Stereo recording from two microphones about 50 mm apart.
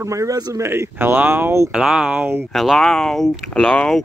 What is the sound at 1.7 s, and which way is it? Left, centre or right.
Speech, centre.